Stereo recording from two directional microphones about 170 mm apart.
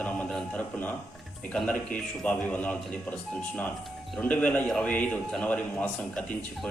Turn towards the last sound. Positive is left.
turn(degrees=5)  # may be behind; listen again after turning